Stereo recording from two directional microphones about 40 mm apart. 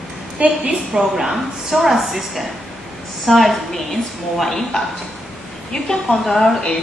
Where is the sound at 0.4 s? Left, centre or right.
Right.